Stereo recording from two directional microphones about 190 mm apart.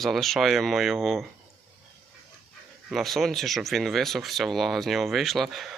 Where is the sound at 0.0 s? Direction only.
Centre (ahead or behind).